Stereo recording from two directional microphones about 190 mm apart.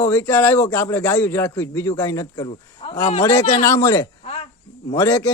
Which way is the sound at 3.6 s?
15° left (ahead or behind).